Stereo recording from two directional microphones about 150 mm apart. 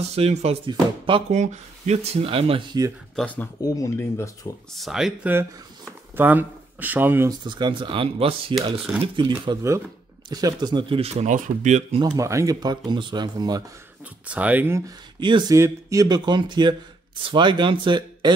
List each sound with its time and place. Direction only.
0.1 s speech: 45° right (ahead or behind)
0.7 s speech: 35° right (ahead or behind)
1.3 s speech: 50° right (ahead or behind)
3.6 s speech: 20° left (ahead or behind)
4.7 s speech: centre (ahead or behind)
7.2 s speech: 30° right (ahead or behind)
9.5 s speech: 20° right (ahead or behind); by 12.0 s 50° right (ahead or behind)
12.0 s speech: 20° right (ahead or behind)
14.2 s speech: 10° right (ahead or behind)
15.1 s speech: 30° right (ahead or behind)
15.5 s speech: 20° right (ahead or behind)